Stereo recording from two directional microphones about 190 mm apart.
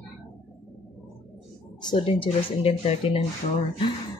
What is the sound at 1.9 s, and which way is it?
Speech, 30° left (ahead or behind).